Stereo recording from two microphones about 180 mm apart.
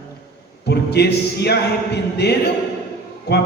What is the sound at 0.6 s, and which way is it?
A man's voice, 65° left (ahead or behind).